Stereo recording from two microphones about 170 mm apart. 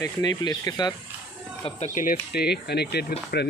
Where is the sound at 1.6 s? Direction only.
45° left (ahead or behind); by 3.0 s 75° left (ahead or behind).